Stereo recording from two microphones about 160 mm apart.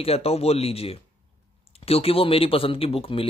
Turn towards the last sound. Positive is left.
turn(degrees=35)  # may be behind; listen again after turning